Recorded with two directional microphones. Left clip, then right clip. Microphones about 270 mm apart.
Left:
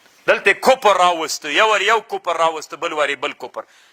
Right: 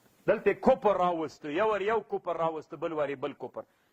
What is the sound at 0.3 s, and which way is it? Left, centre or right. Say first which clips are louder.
A man's voice: left 11 dB; centre.